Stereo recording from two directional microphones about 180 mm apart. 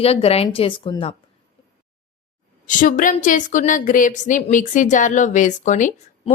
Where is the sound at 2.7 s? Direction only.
45° left (ahead or behind).